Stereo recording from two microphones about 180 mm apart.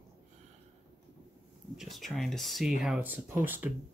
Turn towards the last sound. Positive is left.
turn(degrees=-10)  # may be behind; listen again after turning